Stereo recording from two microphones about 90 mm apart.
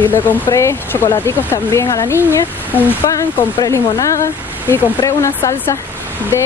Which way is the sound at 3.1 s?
40° left (ahead or behind).